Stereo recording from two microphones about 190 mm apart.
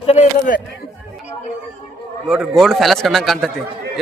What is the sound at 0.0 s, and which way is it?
Speech, 35° left (ahead or behind).